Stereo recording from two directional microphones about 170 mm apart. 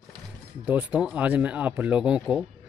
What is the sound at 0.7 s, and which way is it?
Speech, 10° right (ahead or behind).